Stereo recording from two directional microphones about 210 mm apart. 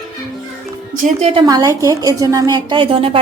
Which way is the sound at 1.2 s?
25° right (ahead or behind).